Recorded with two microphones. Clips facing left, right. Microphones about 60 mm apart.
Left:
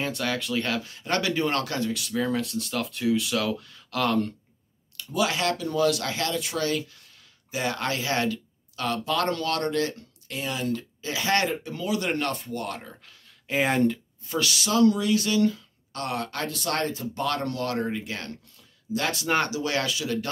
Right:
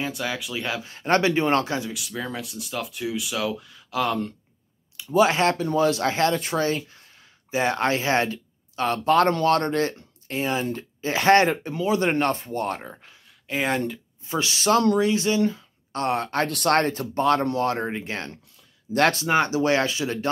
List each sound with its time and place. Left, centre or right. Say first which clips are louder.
0.0 s speech: even; centre
0.8 s speech: right 6 dB; right
1.8 s speech: left 3 dB; centre
5.1 s speech: right 6 dB; right
13.5 s speech: left 2 dB; centre
14.2 s speech: right 1 dB; right
14.7 s speech: right 1 dB; right
15.0 s speech: right 2 dB; right
16.4 s speech: right 8 dB; right
17.1 s speech: right 7 dB; right
19.2 s speech: right 3 dB; centre
19.5 s speech: right 6 dB; right